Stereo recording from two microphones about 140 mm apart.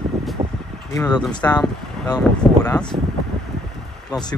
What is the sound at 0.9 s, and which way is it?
Speech, 25° left (ahead or behind).